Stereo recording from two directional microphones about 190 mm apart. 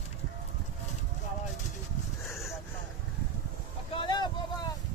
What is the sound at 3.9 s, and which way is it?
Vehicle, 25° left (ahead or behind).